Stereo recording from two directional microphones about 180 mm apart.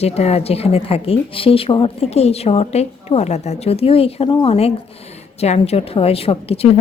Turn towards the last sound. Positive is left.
turn(degrees=35)  # may be behind; listen again after turning